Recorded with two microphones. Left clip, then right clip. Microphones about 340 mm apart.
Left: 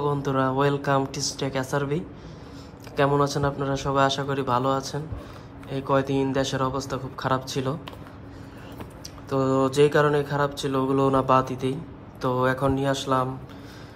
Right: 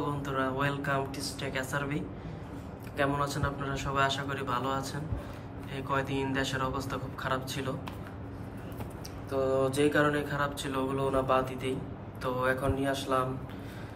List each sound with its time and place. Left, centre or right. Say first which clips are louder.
0.0 s mantra: left 8 dB; centre
9.3 s mantra: left 5 dB; centre